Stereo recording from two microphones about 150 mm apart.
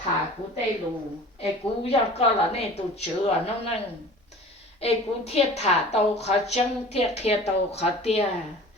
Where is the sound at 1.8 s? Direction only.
40° left (ahead or behind).